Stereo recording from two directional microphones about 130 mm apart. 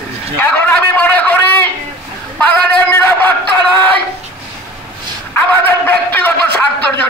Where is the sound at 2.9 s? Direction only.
15° left (ahead or behind).